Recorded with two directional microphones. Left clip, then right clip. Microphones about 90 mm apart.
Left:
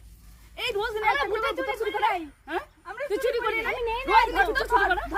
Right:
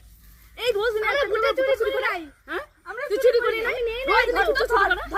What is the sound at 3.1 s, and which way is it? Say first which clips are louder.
A woman's voice: right 7 dB; 50° left (ahead or behind).